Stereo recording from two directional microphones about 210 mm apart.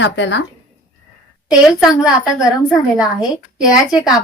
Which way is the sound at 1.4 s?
Centre (ahead or behind).